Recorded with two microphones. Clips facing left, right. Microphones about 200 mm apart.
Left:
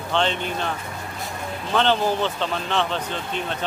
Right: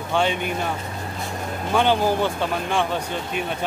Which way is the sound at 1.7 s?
10° right (ahead or behind).